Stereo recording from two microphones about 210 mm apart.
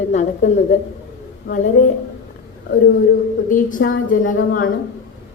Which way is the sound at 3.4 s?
40° left (ahead or behind).